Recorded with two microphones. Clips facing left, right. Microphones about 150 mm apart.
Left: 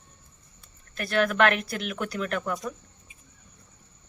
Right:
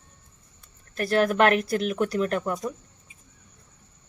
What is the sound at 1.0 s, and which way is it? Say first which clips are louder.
Speech: right 2 dB; 35° right (ahead or behind).